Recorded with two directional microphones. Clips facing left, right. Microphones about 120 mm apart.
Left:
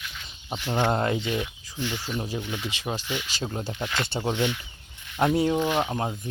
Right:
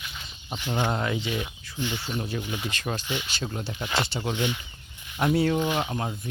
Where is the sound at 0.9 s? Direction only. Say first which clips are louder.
Left 3 dB; 35° left (ahead or behind).